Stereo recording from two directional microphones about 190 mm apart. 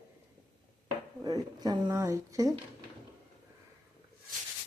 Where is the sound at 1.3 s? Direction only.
20° right (ahead or behind).